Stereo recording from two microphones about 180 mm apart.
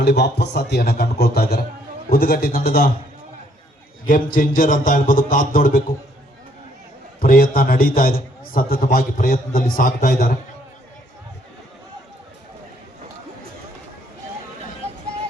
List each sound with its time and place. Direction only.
0.0 s a man's voice: 70° left (ahead or behind)
4.0 s a man's voice: 50° left (ahead or behind)
7.2 s a man's voice: 55° left (ahead or behind)